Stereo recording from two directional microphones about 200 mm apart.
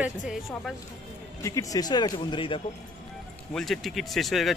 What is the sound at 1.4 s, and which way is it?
Speech, 15° left (ahead or behind).